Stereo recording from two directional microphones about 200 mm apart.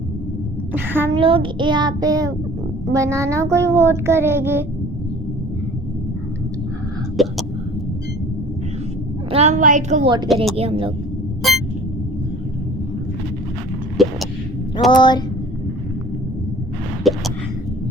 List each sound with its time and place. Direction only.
0.7 s child singing: 10° right (ahead or behind)
1.1 s a child's voice: 25° right (ahead or behind)
2.9 s child singing: 15° right (ahead or behind)
7.2 s hiccup: centre (ahead or behind)
9.3 s a woman's voice: 35° right (ahead or behind)
10.6 s a child's voice: 25° right (ahead or behind)
11.4 s vehicle: centre (ahead or behind)
14.0 s a sound: centre (ahead or behind)
14.9 s speech: 20° left (ahead or behind)
17.0 s a sound: centre (ahead or behind)